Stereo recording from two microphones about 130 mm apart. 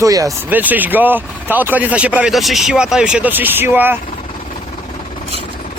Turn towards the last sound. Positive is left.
turn(degrees=-15)  # may be behind; listen again after turning